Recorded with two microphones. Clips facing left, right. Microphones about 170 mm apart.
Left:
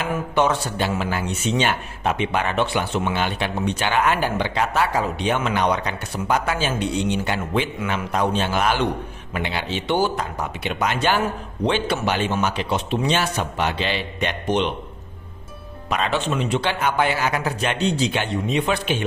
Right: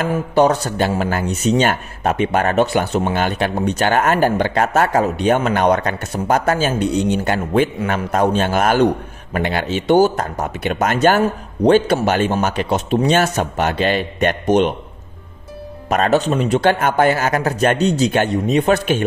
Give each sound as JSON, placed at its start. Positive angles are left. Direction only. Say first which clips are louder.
{"t": 0.1, "sound": "speech", "louder": "right 5 dB", "side_deg": -35}
{"t": 15.9, "sound": "speech", "louder": "right 7 dB", "side_deg": -45}